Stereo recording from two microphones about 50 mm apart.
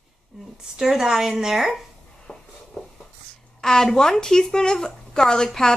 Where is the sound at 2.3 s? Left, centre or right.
Centre.